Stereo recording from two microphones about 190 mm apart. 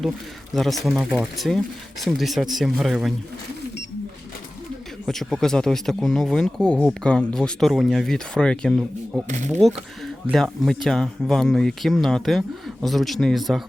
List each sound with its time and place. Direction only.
0.5 s speech: centre (ahead or behind)
5.0 s speech: centre (ahead or behind)
9.2 s speech: 40° right (ahead or behind)
9.5 s speech: centre (ahead or behind)